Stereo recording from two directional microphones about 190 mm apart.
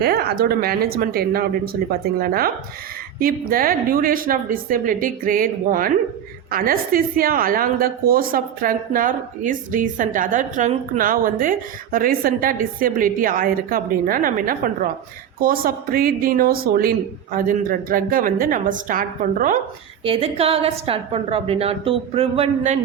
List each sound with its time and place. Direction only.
0.0 s a woman's voice: 55° right (ahead or behind)
20.1 s a woman's voice: 30° right (ahead or behind)